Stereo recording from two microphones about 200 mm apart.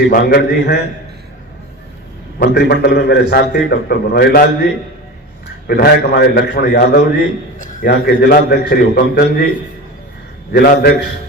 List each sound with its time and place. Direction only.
0.1 s a man's voice: 50° left (ahead or behind)
2.4 s a man's voice: 55° left (ahead or behind)
7.6 s a man's voice: 40° left (ahead or behind)
10.5 s a man's voice: 50° left (ahead or behind)